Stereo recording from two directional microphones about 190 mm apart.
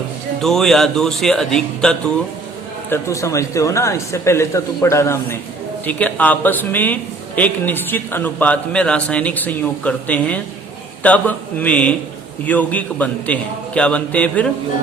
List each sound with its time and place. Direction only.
0.4 s speech: centre (ahead or behind)
2.9 s a man's voice: 15° left (ahead or behind)